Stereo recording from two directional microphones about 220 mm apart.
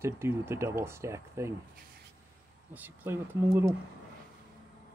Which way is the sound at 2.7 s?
10° right (ahead or behind).